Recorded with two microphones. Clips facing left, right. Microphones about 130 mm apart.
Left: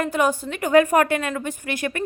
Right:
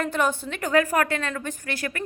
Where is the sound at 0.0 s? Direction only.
5° left (ahead or behind).